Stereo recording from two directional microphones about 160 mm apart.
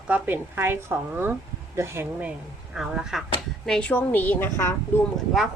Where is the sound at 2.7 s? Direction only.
5° right (ahead or behind).